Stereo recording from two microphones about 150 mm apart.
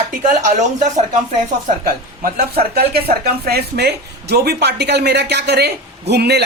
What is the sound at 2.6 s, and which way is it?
A woman's voice, 90° right.